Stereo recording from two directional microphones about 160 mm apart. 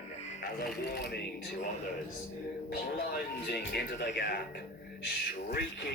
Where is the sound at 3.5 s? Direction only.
90° left.